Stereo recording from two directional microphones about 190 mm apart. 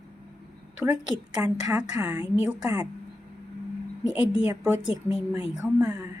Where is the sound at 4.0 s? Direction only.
5° right (ahead or behind).